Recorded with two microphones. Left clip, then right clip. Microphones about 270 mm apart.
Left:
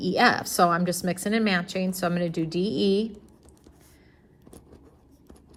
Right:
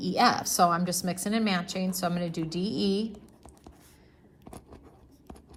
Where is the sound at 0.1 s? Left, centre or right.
Left.